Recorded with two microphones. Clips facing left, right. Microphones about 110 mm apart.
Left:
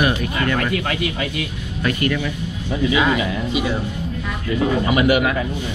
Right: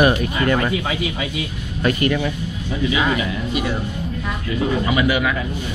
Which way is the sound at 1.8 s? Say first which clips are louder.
Right 2 dB; 25° right (ahead or behind).